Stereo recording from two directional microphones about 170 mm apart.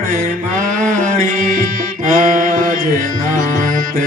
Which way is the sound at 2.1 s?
55° right (ahead or behind).